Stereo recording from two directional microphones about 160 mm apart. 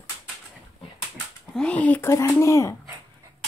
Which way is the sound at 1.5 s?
5° left (ahead or behind).